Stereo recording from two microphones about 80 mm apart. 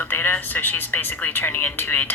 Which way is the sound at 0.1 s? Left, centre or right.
Left.